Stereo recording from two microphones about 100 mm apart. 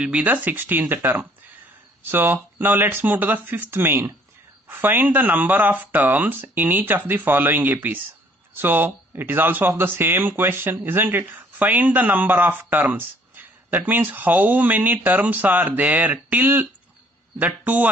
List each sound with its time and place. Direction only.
0.0 s speech: 10° right (ahead or behind)